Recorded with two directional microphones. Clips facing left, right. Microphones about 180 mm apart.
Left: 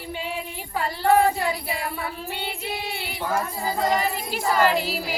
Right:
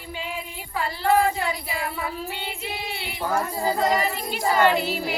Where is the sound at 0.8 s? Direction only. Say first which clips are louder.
Left 2 dB; 40° left (ahead or behind).